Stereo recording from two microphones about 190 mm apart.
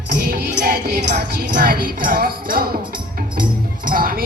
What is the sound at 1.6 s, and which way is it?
Music, 50° right (ahead or behind).